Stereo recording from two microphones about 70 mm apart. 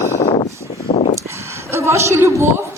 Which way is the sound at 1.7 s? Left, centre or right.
Right.